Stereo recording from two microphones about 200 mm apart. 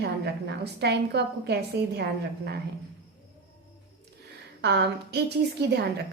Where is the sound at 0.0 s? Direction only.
55° right (ahead or behind).